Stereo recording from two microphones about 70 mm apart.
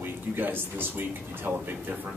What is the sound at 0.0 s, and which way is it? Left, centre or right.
Speech, right.